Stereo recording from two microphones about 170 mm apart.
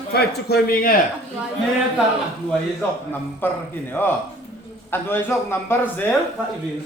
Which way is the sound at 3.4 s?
10° left (ahead or behind).